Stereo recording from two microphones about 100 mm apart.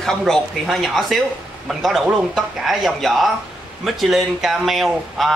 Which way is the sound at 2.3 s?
5° right (ahead or behind).